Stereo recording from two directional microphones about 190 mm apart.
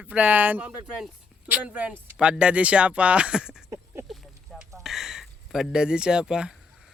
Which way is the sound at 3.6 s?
10° right (ahead or behind).